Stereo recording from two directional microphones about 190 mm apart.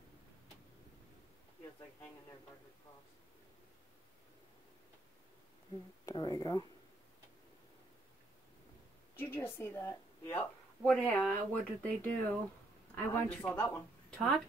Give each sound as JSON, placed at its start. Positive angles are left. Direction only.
{"t": 6.0, "sound": "speech", "side_deg": 20}
{"t": 9.1, "sound": "a woman's voice", "side_deg": 10}